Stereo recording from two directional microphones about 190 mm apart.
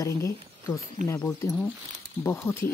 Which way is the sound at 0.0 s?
15° left (ahead or behind).